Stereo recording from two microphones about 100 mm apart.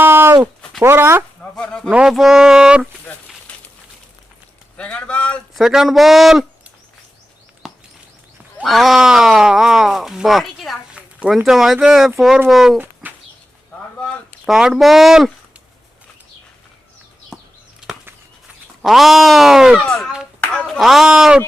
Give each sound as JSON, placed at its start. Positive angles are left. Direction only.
{"t": 0.0, "sound": "a sound", "side_deg": -25}
{"t": 0.8, "sound": "speech", "side_deg": -25}
{"t": 1.4, "sound": "a sound", "side_deg": 10}
{"t": 1.9, "sound": "speech", "side_deg": -5}
{"t": 4.8, "sound": "speech", "side_deg": 10}
{"t": 5.5, "sound": "speech", "side_deg": -5}
{"t": 7.6, "sound": "a sound", "side_deg": -5}
{"t": 8.6, "sound": "speech", "side_deg": 0}
{"t": 10.9, "sound": "speech", "side_deg": -10}
{"t": 12.8, "sound": "bird", "side_deg": -15}
{"t": 14.4, "sound": "speech", "side_deg": -5}
{"t": 17.3, "sound": "a sound", "side_deg": 5}
{"t": 18.8, "sound": "speech", "side_deg": 0}